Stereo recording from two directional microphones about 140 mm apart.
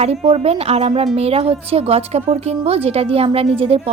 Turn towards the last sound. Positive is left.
turn(degrees=-40)  # may be behind; listen again after turning